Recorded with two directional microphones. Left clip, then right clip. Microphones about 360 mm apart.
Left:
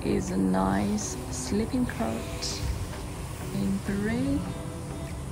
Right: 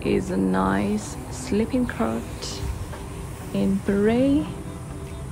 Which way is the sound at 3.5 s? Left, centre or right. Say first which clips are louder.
Right 9 dB; centre.